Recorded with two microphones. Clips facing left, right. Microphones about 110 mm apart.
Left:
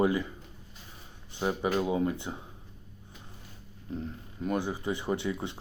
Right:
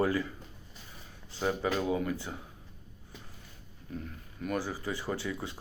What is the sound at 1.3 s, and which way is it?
Speech, 15° left (ahead or behind).